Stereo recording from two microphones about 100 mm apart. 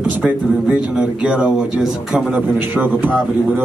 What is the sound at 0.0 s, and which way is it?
Speech, 10° right (ahead or behind).